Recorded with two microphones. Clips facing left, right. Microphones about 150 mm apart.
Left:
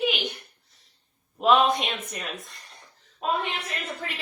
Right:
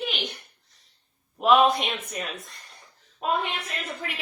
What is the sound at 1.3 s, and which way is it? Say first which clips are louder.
A woman's voice: right 1 dB; centre (ahead or behind).